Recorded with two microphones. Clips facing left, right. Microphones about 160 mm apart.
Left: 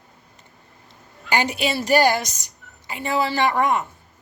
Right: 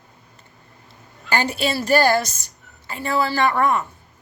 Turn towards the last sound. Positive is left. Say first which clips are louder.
# right 1 dB
turn(degrees=20)  # may be behind; listen again after turning